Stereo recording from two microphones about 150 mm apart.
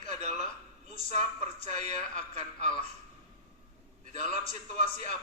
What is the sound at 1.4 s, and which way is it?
Speech, 50° right (ahead or behind).